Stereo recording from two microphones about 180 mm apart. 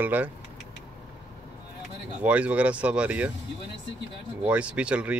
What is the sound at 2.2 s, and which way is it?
Speech, 5° right (ahead or behind).